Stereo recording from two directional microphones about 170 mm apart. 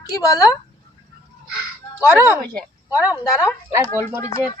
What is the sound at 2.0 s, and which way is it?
Speech, 15° right (ahead or behind).